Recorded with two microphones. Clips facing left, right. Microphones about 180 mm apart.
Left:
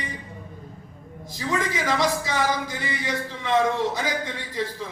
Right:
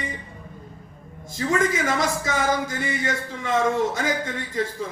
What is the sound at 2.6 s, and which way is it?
A man's voice, 45° right (ahead or behind).